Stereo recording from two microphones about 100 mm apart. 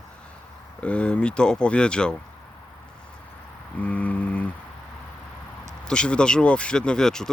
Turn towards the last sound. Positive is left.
turn(degrees=5)  # may be behind; listen again after turning